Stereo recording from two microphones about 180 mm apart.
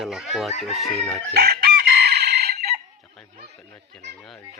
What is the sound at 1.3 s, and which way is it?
Chicken, 65° right (ahead or behind).